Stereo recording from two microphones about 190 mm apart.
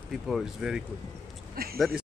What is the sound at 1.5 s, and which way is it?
Speech, 50° right (ahead or behind).